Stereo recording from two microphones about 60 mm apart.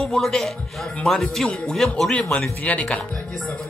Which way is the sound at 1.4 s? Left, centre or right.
Centre.